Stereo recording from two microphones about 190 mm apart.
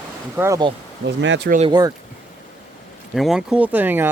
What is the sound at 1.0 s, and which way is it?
Speech, 70° right (ahead or behind).